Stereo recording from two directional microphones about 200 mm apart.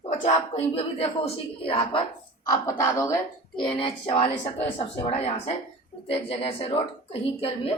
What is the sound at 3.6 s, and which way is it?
A woman's voice, 25° left (ahead or behind).